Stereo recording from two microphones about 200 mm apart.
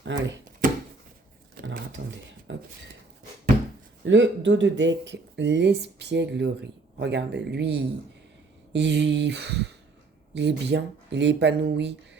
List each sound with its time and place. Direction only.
0.0 s speech: 65° right (ahead or behind)
0.6 s a sound: 45° right (ahead or behind)
2.5 s dishes: 65° right (ahead or behind)
4.0 s speech: 65° right (ahead or behind)